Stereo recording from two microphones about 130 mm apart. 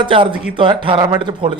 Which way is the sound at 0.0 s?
40° right (ahead or behind).